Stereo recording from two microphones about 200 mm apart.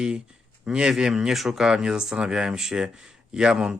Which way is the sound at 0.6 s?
5° right (ahead or behind).